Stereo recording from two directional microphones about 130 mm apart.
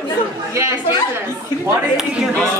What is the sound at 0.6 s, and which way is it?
Speech, 20° right (ahead or behind).